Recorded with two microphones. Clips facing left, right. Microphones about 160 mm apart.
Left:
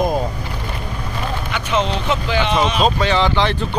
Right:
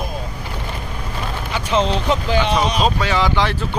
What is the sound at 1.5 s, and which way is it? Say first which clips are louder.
Speech: right 2 dB; 35° right (ahead or behind).